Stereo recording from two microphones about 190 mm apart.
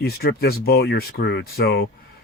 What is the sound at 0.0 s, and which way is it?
Speech, 55° left (ahead or behind).